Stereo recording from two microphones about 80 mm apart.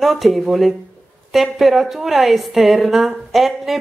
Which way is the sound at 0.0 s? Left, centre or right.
Centre.